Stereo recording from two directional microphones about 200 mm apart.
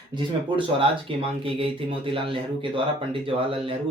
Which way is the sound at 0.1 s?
25° right (ahead or behind).